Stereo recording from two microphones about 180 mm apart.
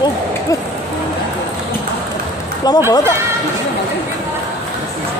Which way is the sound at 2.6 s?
20° left (ahead or behind).